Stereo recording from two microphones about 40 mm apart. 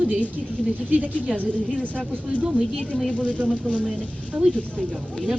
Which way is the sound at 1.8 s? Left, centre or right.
Left.